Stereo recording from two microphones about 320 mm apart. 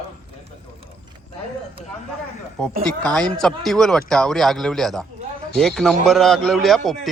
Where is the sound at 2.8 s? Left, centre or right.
Centre.